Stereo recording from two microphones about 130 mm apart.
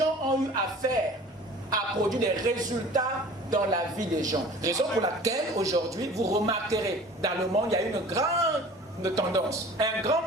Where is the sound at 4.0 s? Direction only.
75° right (ahead or behind).